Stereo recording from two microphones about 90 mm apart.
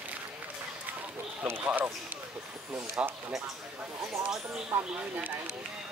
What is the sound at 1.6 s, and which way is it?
Speech, 20° right (ahead or behind).